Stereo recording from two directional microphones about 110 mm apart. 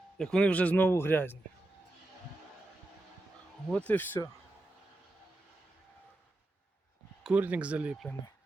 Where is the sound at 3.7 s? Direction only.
10° left (ahead or behind).